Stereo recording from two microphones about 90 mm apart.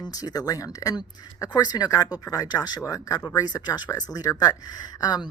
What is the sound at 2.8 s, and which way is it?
Speech, 35° left (ahead or behind).